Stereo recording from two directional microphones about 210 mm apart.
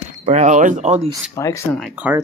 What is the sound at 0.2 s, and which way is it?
Speech, 35° right (ahead or behind).